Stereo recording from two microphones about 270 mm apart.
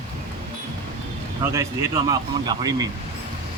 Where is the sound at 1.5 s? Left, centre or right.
Centre.